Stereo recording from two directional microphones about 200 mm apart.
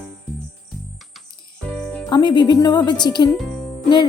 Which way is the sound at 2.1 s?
20° left (ahead or behind).